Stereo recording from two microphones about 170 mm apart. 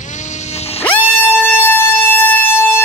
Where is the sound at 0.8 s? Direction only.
10° left (ahead or behind).